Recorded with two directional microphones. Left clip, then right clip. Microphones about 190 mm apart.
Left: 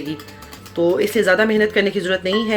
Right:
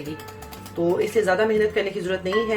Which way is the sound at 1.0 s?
40° left (ahead or behind).